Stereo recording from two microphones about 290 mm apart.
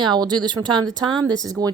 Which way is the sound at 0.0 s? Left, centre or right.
Centre.